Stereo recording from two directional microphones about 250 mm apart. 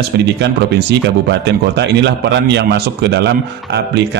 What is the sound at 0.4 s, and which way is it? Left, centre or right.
A man's voice, right.